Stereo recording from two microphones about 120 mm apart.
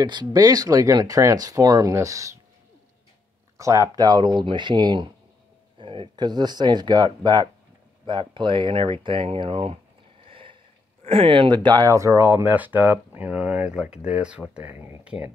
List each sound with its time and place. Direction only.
0.0 s speech: 35° right (ahead or behind)
3.5 s speech: 25° right (ahead or behind); by 9.8 s 50° right (ahead or behind)
10.2 s boat: 45° right (ahead or behind)
11.1 s speech: 50° right (ahead or behind); by 15.1 s 15° right (ahead or behind)